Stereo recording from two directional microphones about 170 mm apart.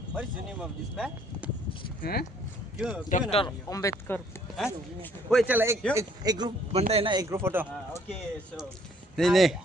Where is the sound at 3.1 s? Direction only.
45° left (ahead or behind).